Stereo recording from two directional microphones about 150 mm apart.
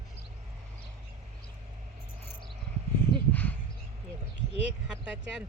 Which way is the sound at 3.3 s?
10° left (ahead or behind).